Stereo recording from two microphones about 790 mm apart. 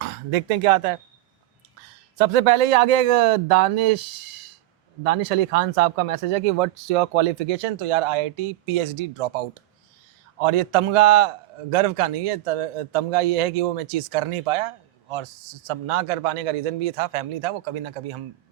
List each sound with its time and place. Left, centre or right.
0.0 s speech: right
2.1 s speech: right
5.0 s speech: right